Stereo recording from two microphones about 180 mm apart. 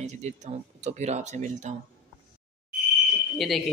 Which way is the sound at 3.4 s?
Centre (ahead or behind).